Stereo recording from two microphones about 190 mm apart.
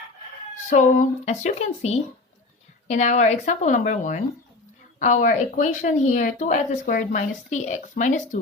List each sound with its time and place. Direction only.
0.7 s speech: 40° left (ahead or behind)